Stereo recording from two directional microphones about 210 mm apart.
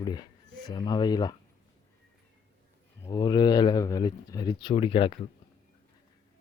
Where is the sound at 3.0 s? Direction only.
20° left (ahead or behind).